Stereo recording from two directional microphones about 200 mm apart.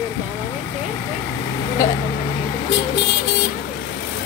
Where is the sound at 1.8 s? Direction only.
15° left (ahead or behind).